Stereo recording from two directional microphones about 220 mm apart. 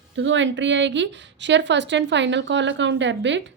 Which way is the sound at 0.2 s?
55° right (ahead or behind).